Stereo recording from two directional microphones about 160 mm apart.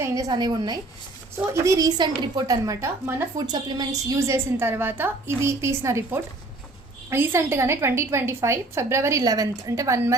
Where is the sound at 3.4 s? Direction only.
25° right (ahead or behind).